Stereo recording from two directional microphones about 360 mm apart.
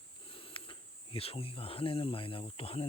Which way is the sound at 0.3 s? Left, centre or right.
Centre.